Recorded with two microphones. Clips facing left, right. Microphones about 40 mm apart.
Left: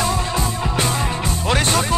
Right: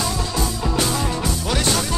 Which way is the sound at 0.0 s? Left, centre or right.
Left.